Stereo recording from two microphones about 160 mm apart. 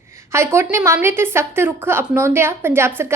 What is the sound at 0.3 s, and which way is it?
A woman's voice, 15° right (ahead or behind).